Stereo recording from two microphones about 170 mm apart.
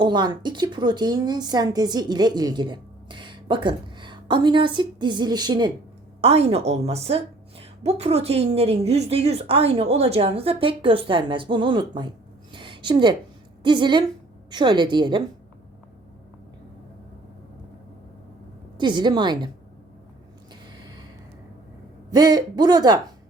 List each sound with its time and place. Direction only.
0.0 s a woman's voice: 25° right (ahead or behind)
6.2 s a woman's voice: 35° right (ahead or behind)
18.8 s a woman's voice: 25° right (ahead or behind)
22.1 s a woman's voice: 25° right (ahead or behind)